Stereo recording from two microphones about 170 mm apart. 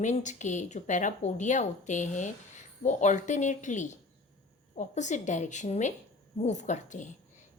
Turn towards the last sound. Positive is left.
turn(degrees=45)  # may be behind; listen again after turning